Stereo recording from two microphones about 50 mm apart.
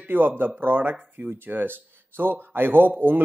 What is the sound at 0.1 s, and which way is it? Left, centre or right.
Speech, right.